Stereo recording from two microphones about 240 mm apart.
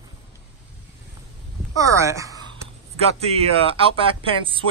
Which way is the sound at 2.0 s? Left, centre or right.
Centre.